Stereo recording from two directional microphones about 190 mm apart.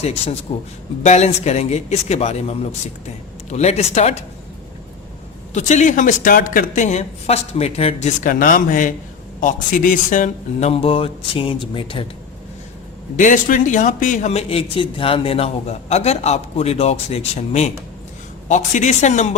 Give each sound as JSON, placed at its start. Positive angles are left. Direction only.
{"t": 0.0, "sound": "speech", "side_deg": 30}
{"t": 5.5, "sound": "speech", "side_deg": 40}
{"t": 13.1, "sound": "speech", "side_deg": 40}